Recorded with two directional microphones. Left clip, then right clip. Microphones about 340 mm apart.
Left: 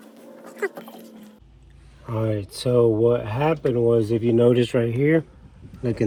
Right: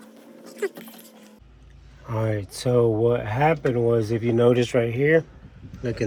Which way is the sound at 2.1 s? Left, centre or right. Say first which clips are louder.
Left 1 dB; centre.